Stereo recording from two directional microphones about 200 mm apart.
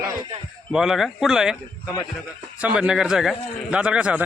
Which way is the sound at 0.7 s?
Centre (ahead or behind).